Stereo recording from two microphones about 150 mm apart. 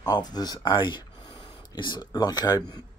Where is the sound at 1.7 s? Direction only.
30° left (ahead or behind).